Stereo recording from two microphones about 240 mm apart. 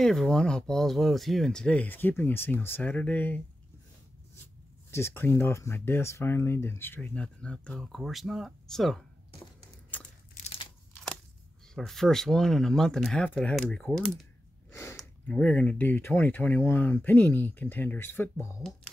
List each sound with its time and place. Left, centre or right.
0.0 s speech: centre
4.9 s speech: centre
10.3 s crumpling: left
11.7 s speech: centre
14.7 s gasp: centre
15.0 s speech: centre